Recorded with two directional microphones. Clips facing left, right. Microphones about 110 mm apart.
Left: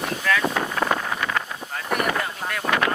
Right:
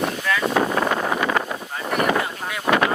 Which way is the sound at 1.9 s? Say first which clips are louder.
Right 3 dB; centre (ahead or behind).